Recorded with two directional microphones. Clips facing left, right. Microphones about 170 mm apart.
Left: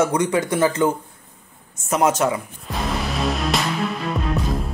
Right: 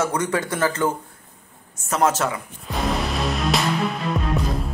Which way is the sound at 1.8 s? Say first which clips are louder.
Left 2 dB; 15° left (ahead or behind).